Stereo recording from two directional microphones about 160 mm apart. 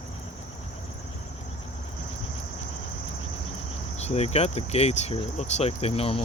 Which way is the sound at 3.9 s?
40° left (ahead or behind).